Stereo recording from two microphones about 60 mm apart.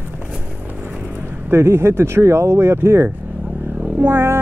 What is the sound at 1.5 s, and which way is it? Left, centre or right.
Speech, right.